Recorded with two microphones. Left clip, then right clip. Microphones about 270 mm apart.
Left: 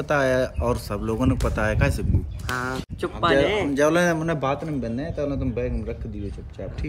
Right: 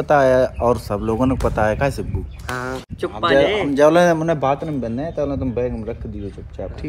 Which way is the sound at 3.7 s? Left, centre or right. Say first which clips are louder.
Right 9 dB; centre.